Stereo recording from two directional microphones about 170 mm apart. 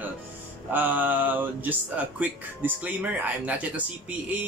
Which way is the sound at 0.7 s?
10° right (ahead or behind).